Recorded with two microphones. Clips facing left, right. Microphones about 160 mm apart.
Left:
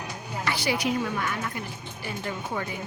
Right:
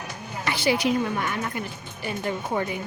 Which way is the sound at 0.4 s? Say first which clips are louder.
Right 4 dB; 25° right (ahead or behind).